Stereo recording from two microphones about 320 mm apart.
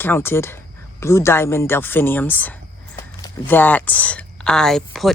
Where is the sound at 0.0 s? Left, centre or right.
Centre.